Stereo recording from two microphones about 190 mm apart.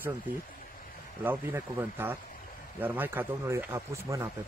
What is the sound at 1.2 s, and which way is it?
Speech, 10° right (ahead or behind).